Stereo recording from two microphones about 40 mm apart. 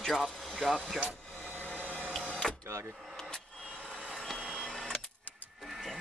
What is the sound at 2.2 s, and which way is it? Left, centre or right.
Power windows, left.